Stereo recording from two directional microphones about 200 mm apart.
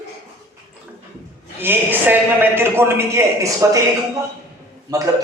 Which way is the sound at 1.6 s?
10° right (ahead or behind).